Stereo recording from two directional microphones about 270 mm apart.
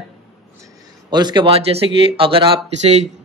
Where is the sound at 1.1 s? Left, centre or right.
Centre.